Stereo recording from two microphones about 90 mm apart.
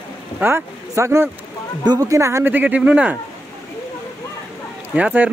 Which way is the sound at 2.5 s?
15° right (ahead or behind).